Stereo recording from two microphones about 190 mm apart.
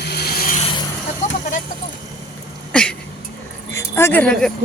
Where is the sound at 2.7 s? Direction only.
5° left (ahead or behind).